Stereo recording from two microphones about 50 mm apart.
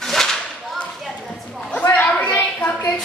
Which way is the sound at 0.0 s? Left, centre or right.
Centre.